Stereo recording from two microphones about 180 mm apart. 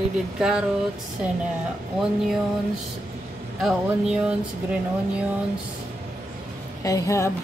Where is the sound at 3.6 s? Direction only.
5° right (ahead or behind).